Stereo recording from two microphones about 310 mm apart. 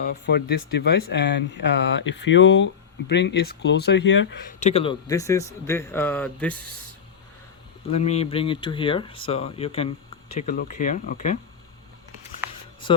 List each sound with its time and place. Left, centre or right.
0.0 s speech: left
4.6 s speech: centre
7.9 s speech: centre